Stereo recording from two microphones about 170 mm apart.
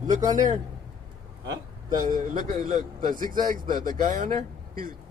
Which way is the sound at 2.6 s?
50° right (ahead or behind).